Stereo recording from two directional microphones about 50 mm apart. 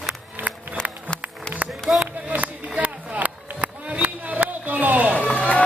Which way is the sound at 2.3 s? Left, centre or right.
Right.